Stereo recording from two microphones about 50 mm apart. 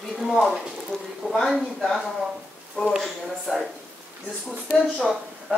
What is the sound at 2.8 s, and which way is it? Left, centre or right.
Speech, left.